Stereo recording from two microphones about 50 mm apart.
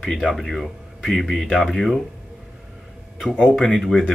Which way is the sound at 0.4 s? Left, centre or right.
Centre.